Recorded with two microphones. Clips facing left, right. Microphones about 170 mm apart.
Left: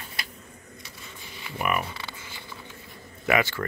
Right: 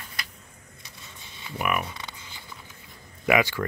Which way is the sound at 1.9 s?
20° right (ahead or behind).